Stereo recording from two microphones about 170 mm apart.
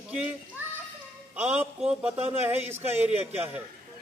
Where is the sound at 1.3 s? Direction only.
10° right (ahead or behind).